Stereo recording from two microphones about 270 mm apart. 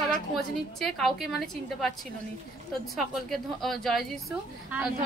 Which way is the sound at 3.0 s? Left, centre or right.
Centre.